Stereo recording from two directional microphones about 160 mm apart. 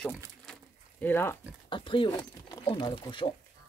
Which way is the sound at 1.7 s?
30° left (ahead or behind).